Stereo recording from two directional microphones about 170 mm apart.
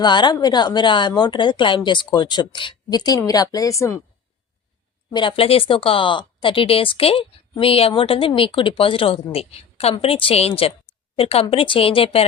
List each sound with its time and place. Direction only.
0.0 s speech: 25° left (ahead or behind)
5.1 s a woman's voice: 30° left (ahead or behind)